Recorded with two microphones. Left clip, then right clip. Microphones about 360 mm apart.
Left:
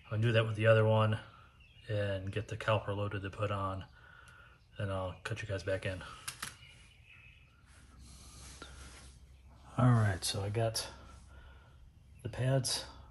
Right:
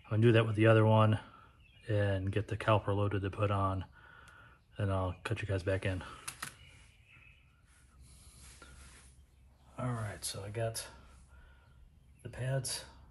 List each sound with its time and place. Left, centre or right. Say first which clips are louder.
0.1 s speech: right 4 dB; centre
9.8 s speech: left 8 dB; left
12.2 s speech: left 4 dB; left